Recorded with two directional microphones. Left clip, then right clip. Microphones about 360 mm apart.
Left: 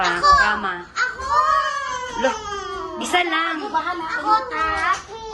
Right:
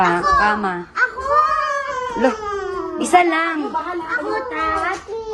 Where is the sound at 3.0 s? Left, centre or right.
Right.